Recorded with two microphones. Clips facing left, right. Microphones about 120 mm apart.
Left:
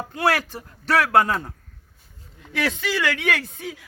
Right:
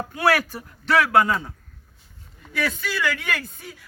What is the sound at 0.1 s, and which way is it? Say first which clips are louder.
Speech: right 1 dB; 25° left (ahead or behind).